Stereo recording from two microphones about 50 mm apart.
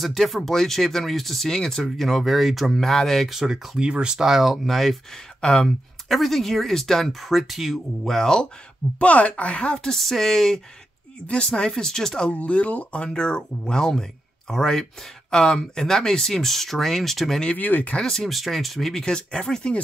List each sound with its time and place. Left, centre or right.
0.0 s speech: centre
3.3 s speech: centre
3.8 s speech: centre
4.2 s speech: centre
5.4 s speech: centre
6.1 s speech: centre
9.0 s speech: left
12.3 s speech: left; by 17.4 s centre
17.6 s speech: left
17.9 s speech: centre